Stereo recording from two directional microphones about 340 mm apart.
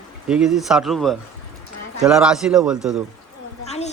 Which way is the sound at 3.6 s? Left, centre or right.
Centre.